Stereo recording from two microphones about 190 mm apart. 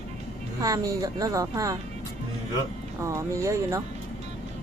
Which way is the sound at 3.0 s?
15° right (ahead or behind).